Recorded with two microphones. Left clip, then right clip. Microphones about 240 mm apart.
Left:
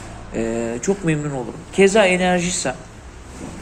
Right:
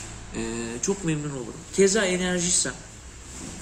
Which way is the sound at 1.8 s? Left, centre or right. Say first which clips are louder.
Left 8 dB; centre.